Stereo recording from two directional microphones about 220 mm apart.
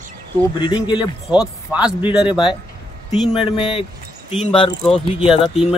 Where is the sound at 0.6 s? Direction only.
20° left (ahead or behind).